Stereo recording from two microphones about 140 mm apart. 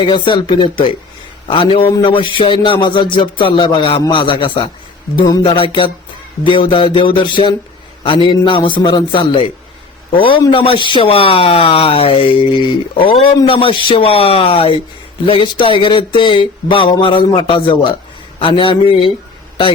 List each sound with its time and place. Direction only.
0.0 s speech: 35° left (ahead or behind)